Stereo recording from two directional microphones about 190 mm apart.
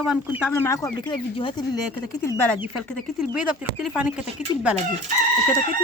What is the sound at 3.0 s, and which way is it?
Speech, 5° right (ahead or behind).